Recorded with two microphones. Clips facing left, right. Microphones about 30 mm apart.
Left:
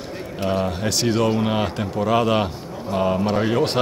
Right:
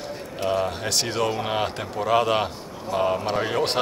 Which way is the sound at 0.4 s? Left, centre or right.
Centre.